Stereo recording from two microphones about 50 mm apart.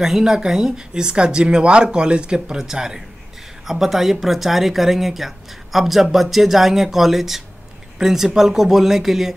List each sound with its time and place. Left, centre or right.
0.0 s speech: centre